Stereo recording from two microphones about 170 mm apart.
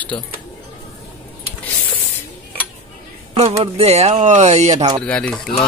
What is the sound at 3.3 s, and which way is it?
Speech, 40° right (ahead or behind).